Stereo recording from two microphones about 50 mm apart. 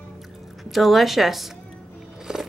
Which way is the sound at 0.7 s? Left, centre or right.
Centre.